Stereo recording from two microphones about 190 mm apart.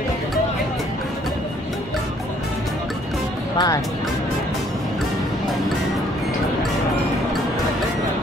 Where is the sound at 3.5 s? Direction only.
20° left (ahead or behind).